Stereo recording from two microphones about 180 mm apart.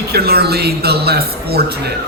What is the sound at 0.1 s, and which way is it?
A man's voice, 60° right (ahead or behind).